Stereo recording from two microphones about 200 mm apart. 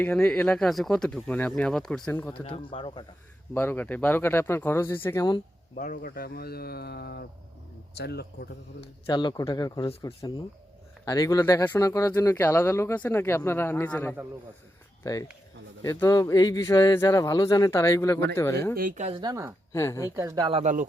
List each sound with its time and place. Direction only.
0.0 s speech: 5° left (ahead or behind)
2.4 s speech: 25° left (ahead or behind)
3.5 s speech: 10° left (ahead or behind)
5.7 s speech: 40° left (ahead or behind)
8.8 s speech: 25° left (ahead or behind)
18.8 s speech: 40° right (ahead or behind)
19.1 s speech: 20° right (ahead or behind)
19.7 s speech: 15° left (ahead or behind)
20.1 s speech: 20° right (ahead or behind); by 20.8 s 35° right (ahead or behind)